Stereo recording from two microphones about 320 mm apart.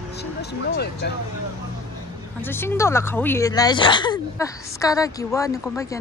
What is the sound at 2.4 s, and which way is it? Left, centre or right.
Speech, centre.